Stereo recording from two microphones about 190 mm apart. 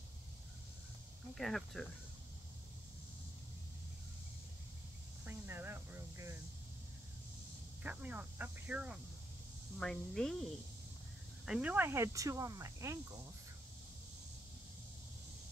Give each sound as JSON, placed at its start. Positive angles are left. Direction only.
{"t": 1.3, "sound": "speech", "side_deg": 0}
{"t": 5.2, "sound": "a sound", "side_deg": -10}
{"t": 7.8, "sound": "speech", "side_deg": -5}
{"t": 9.8, "sound": "speech", "side_deg": 5}
{"t": 11.4, "sound": "speech", "side_deg": -5}